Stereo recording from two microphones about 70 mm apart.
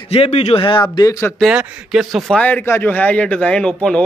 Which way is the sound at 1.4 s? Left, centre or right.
Centre.